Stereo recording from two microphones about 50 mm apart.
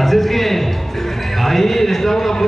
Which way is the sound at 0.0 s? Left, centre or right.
Centre.